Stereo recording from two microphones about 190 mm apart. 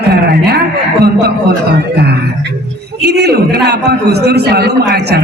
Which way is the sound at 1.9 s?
60° right (ahead or behind).